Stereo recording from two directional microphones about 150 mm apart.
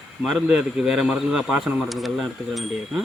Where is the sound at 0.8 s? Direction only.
5° right (ahead or behind).